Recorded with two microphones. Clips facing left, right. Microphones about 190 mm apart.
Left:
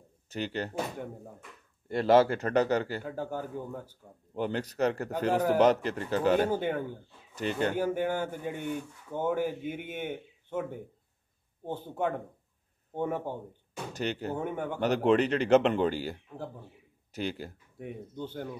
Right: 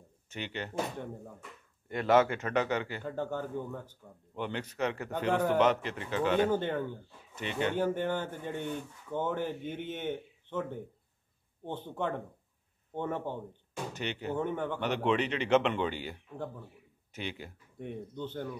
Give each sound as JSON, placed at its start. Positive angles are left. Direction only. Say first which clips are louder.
{"t": 0.3, "sound": "a man's voice", "louder": "left 5 dB", "side_deg": 40}
{"t": 1.9, "sound": "a man's voice", "louder": "left 3 dB", "side_deg": 30}
{"t": 3.0, "sound": "speech", "louder": "even", "side_deg": 10}
{"t": 4.4, "sound": "a man's voice", "louder": "left 4 dB", "side_deg": 40}
{"t": 6.5, "sound": "speech", "louder": "left 1 dB", "side_deg": 10}
{"t": 7.3, "sound": "a man's voice", "louder": "left 3 dB", "side_deg": 40}
{"t": 7.7, "sound": "speech", "louder": "left 1 dB", "side_deg": 10}
{"t": 13.9, "sound": "a man's voice", "louder": "left 5 dB", "side_deg": 40}
{"t": 14.3, "sound": "speech", "louder": "even", "side_deg": 10}
{"t": 14.8, "sound": "a man's voice", "louder": "left 7 dB", "side_deg": 40}
{"t": 17.7, "sound": "speech", "louder": "even", "side_deg": 10}